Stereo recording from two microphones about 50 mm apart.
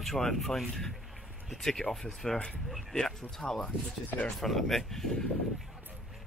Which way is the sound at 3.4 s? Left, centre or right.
Centre.